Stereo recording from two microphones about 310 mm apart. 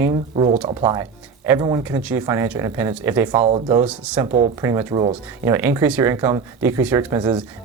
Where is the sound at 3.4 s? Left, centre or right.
Centre.